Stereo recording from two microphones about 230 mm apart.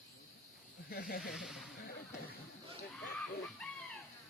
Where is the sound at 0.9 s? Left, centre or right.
Left.